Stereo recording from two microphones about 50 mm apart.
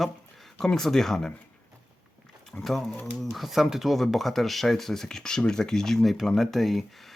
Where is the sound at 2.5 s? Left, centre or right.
Centre.